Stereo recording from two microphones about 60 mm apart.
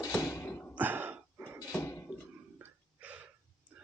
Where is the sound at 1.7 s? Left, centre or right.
Left.